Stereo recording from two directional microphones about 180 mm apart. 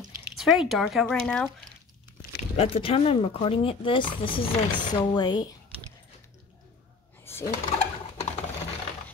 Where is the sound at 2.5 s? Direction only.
35° left (ahead or behind).